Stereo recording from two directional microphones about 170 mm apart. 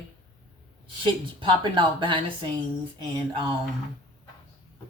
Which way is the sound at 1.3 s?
30° right (ahead or behind).